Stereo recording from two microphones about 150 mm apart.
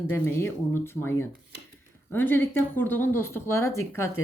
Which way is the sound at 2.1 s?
15° left (ahead or behind).